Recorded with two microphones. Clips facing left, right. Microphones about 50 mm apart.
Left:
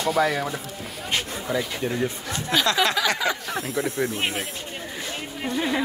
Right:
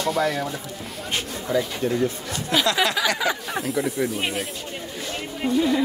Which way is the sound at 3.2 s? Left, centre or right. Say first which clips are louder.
Right 1 dB; centre.